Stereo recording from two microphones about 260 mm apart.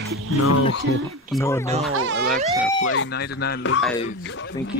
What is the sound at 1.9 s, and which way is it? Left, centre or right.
Speech, right.